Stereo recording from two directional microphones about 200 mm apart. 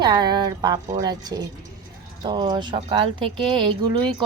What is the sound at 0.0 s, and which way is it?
A woman's voice, 20° right (ahead or behind).